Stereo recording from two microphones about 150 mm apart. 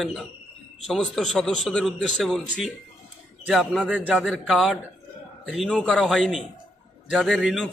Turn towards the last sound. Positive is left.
turn(degrees=0)  # may be behind; listen again after turning